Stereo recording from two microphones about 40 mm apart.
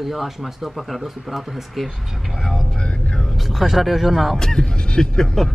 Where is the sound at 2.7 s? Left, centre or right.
Left.